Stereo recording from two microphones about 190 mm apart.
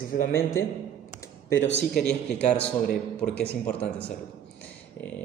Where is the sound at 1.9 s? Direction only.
5° left (ahead or behind).